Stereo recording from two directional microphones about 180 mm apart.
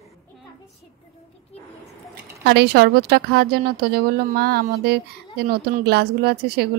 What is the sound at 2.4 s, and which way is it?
A woman's voice, 65° right (ahead or behind).